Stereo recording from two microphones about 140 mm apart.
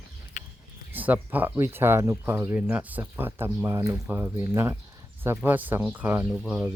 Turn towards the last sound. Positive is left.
turn(degrees=-10)  # may be behind; listen again after turning